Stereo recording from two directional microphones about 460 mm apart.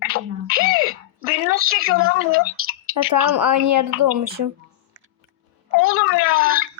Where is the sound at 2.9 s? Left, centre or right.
Right.